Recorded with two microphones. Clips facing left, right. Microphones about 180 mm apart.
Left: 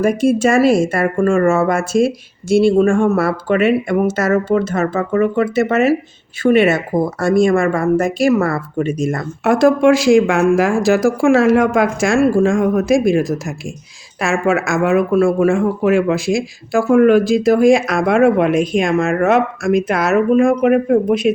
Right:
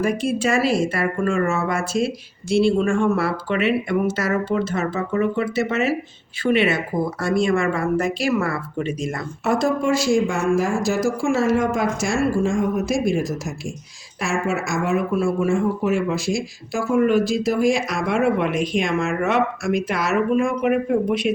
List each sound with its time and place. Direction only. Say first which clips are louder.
0.0 s speech: left 7 dB; 45° left (ahead or behind)
9.4 s speech: left 8 dB; 90° left
14.2 s a woman's voice: left 7 dB; 60° left (ahead or behind)
15.4 s speech: left 6 dB; 90° left
17.4 s speech: left 8 dB; 55° left (ahead or behind)